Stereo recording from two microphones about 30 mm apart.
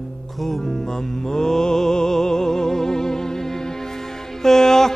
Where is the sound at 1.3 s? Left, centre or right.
Centre.